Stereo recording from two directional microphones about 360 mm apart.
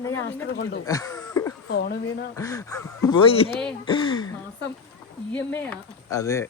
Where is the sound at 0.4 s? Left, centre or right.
Left.